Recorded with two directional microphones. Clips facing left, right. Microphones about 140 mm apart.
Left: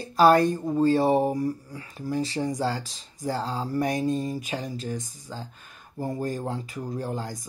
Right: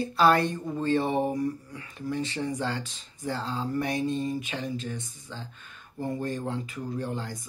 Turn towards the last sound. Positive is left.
turn(degrees=40)  # may be behind; listen again after turning